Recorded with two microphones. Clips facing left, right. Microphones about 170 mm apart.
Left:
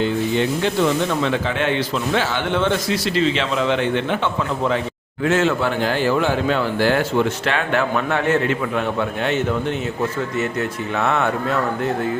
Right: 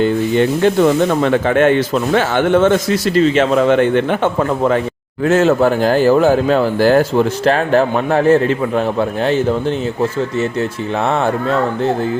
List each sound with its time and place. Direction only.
0.0 s speech: 50° right (ahead or behind); by 11.9 s 30° right (ahead or behind)